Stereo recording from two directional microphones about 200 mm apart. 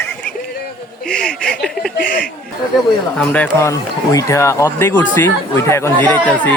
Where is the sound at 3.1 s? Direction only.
5° left (ahead or behind).